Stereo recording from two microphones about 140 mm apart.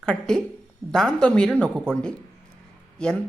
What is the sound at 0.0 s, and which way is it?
A woman's voice, 5° left (ahead or behind).